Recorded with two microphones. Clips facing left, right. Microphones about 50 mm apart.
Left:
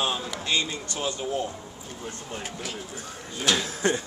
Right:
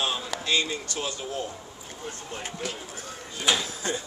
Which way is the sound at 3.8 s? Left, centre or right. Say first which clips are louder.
Left 7 dB; left.